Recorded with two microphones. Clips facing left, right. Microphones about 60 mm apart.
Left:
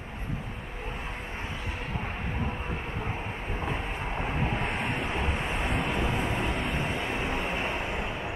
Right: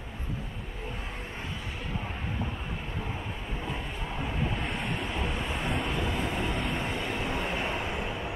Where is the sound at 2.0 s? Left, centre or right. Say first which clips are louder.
Left 2 dB; left.